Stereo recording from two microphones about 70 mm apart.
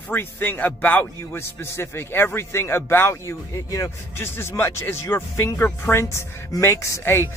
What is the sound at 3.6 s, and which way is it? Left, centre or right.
Speech, left.